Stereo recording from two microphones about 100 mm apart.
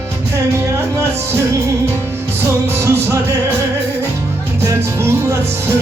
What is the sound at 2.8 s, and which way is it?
Music, 30° right (ahead or behind).